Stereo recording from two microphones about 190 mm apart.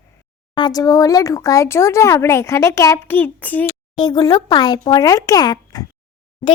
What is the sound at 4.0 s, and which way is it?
Speech, 20° left (ahead or behind).